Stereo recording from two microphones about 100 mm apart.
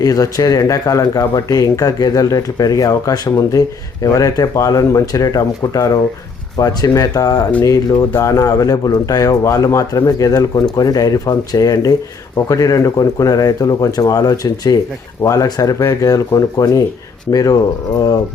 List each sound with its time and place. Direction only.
0.0 s speech: 40° left (ahead or behind)